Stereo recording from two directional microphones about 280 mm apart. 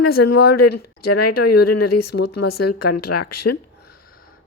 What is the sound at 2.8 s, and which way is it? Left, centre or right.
Speech, left.